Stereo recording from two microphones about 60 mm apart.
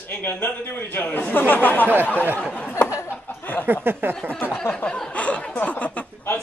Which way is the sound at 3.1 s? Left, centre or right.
Left.